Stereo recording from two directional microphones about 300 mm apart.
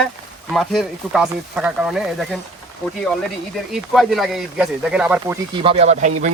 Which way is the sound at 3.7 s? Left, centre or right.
Centre.